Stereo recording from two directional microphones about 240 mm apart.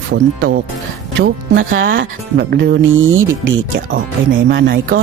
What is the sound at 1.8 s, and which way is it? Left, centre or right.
Speech, right.